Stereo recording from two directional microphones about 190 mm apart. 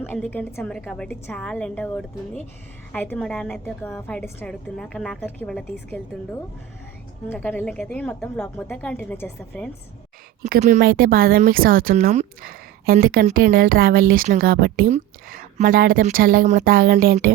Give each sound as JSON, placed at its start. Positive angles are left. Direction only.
{"t": 0.0, "sound": "a woman's voice", "side_deg": 10}
{"t": 7.3, "sound": "a woman's voice", "side_deg": 10}
{"t": 10.4, "sound": "a woman's voice", "side_deg": -40}
{"t": 10.8, "sound": "speech", "side_deg": -50}